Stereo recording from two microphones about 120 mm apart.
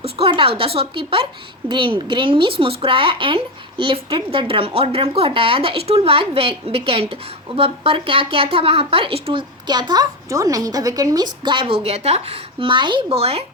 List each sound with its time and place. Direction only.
0.0 s a woman's voice: 50° right (ahead or behind); by 11.3 s 30° right (ahead or behind)
11.4 s a woman's voice: 45° right (ahead or behind)